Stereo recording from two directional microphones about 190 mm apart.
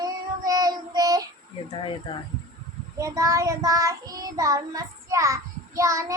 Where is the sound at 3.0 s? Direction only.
15° right (ahead or behind).